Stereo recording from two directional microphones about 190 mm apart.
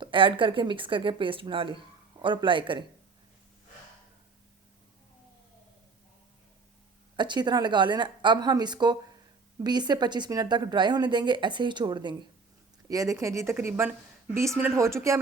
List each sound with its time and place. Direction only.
0.0 s a woman's voice: 25° right (ahead or behind)
7.2 s a woman's voice: 25° right (ahead or behind)